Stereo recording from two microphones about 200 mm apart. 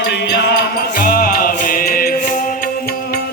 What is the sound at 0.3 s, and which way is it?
Music, 60° left (ahead or behind).